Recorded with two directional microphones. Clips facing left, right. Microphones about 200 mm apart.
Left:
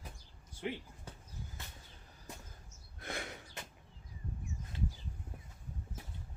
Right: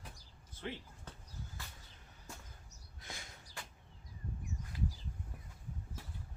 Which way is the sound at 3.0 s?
60° left (ahead or behind).